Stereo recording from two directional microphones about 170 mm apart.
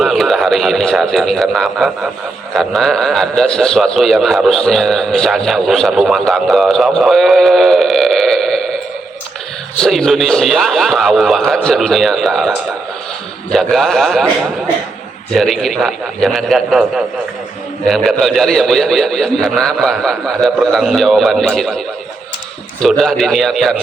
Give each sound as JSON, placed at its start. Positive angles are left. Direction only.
{"t": 0.0, "sound": "a man's voice", "side_deg": 0}
{"t": 9.8, "sound": "a man's voice", "side_deg": 0}
{"t": 15.4, "sound": "a man's voice", "side_deg": 0}
{"t": 22.8, "sound": "a man's voice", "side_deg": 0}